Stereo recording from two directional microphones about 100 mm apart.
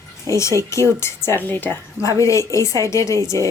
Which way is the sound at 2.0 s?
30° left (ahead or behind).